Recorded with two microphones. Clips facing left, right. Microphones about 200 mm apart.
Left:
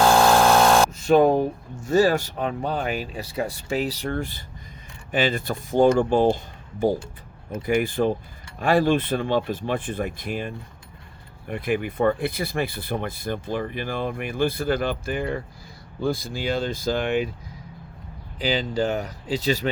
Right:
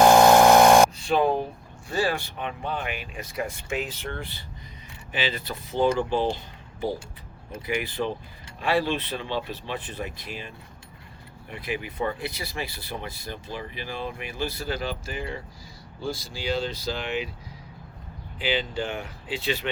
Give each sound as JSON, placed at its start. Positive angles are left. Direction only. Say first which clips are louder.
{"t": 0.0, "sound": "a sound", "louder": "right 2 dB", "side_deg": -20}
{"t": 0.9, "sound": "speech", "louder": "left 6 dB", "side_deg": 45}
{"t": 18.3, "sound": "speech", "louder": "left 4 dB", "side_deg": 40}